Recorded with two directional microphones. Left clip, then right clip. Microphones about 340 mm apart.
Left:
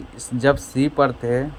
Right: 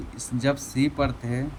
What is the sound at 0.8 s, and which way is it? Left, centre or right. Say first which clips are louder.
Speech: left 11 dB; left.